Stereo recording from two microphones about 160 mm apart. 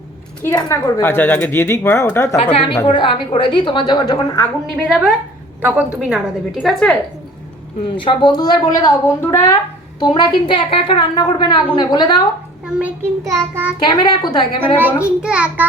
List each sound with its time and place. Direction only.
0.4 s speech: 15° left (ahead or behind)
2.3 s a woman's voice: 35° left (ahead or behind)
4.9 s a woman's voice: 5° right (ahead or behind)
6.5 s a woman's voice: centre (ahead or behind)
7.9 s a woman's voice: 30° left (ahead or behind)
12.6 s a child's voice: 10° right (ahead or behind)
13.8 s a woman's voice: 25° left (ahead or behind)
14.6 s a woman's voice: 10° right (ahead or behind)